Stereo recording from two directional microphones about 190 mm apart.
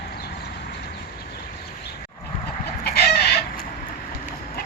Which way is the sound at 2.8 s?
55° left (ahead or behind).